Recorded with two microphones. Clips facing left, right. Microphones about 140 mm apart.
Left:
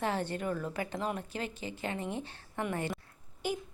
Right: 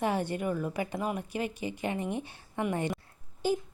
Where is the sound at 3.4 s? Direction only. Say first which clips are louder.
Right 6 dB; 30° right (ahead or behind).